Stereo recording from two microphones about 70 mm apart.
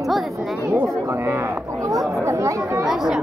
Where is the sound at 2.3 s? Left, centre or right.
Right.